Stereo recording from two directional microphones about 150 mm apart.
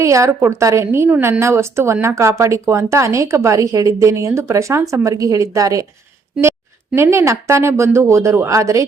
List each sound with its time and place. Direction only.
0.0 s a woman's voice: 20° right (ahead or behind)
6.9 s a woman's voice: 15° right (ahead or behind)